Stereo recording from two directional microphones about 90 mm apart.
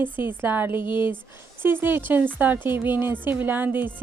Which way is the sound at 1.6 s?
25° right (ahead or behind).